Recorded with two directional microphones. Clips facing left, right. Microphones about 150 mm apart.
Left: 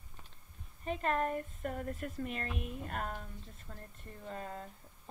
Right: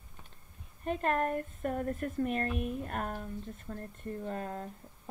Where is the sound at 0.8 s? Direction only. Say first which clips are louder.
Right 3 dB; 50° right (ahead or behind).